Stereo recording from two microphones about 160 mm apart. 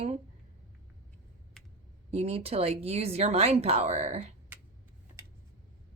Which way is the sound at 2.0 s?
40° right (ahead or behind).